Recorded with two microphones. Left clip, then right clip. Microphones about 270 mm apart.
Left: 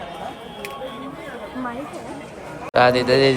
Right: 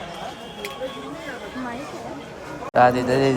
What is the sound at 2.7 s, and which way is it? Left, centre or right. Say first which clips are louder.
Speech: left 2 dB; centre.